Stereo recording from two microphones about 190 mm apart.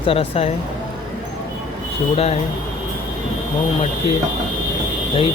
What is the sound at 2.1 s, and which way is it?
Speech, 30° left (ahead or behind).